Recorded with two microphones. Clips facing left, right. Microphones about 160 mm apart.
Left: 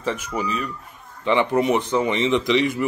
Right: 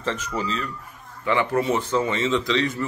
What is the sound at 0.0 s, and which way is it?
A man's voice, 10° left (ahead or behind).